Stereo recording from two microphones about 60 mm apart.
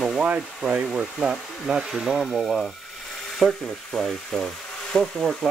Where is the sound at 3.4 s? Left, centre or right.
Centre.